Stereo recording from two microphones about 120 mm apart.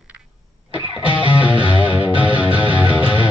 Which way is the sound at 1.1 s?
45° left (ahead or behind).